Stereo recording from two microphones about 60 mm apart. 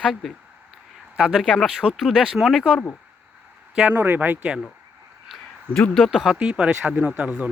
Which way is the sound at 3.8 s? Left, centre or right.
Right.